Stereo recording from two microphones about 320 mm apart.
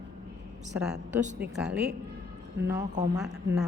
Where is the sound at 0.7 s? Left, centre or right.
Centre.